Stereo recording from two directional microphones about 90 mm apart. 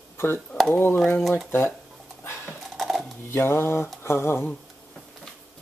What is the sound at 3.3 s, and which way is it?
Speech, 25° left (ahead or behind).